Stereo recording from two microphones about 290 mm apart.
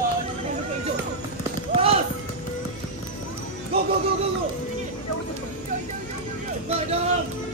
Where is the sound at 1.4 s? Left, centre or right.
Centre.